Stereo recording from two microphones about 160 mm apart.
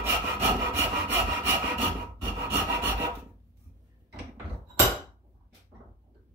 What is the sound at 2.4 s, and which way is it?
Rub, 15° right (ahead or behind).